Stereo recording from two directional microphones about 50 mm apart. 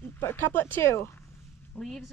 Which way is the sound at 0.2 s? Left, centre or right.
Left.